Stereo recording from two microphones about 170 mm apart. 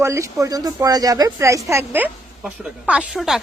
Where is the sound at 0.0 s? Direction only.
15° right (ahead or behind).